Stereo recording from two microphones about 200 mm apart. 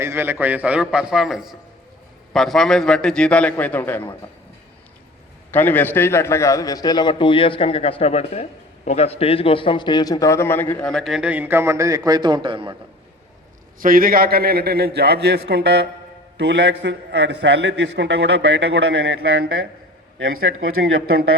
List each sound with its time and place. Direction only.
0.0 s a man's voice: 10° right (ahead or behind); by 4.0 s 10° left (ahead or behind)
5.5 s a man's voice: 10° left (ahead or behind); by 12.7 s 25° right (ahead or behind)
13.7 s a man's voice: 45° right (ahead or behind); by 19.5 s 60° right (ahead or behind)